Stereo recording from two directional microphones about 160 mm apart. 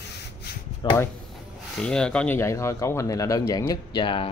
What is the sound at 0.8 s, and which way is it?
Speech, 30° left (ahead or behind).